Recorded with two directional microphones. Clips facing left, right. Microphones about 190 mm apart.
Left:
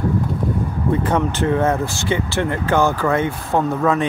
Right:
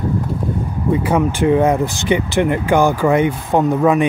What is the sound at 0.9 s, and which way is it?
Speech, 10° right (ahead or behind).